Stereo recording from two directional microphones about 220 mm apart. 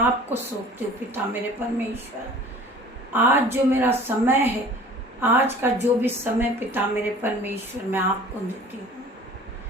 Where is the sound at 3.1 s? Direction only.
10° right (ahead or behind).